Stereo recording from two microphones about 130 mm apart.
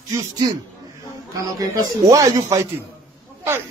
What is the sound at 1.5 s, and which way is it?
Speech, 25° right (ahead or behind).